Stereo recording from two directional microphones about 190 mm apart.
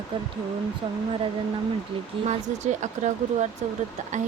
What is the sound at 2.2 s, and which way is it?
Speech, 40° right (ahead or behind).